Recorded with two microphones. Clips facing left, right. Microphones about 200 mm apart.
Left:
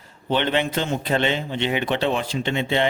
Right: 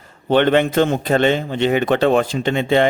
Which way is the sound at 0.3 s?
50° right (ahead or behind).